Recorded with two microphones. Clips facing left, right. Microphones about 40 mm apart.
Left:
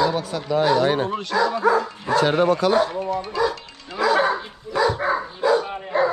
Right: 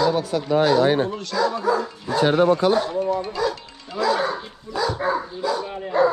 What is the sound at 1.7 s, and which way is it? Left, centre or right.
Speech, left.